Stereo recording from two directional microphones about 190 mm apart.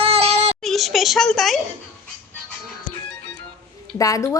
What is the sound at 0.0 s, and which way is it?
Child singing, 30° right (ahead or behind).